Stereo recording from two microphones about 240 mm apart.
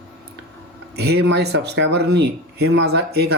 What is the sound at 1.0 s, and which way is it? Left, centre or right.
A man's voice, right.